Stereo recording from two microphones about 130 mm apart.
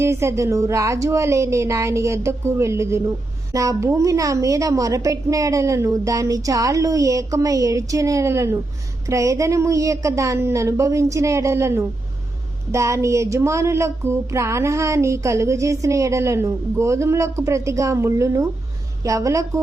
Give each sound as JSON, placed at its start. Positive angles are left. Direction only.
{"t": 0.0, "sound": "speech", "side_deg": -20}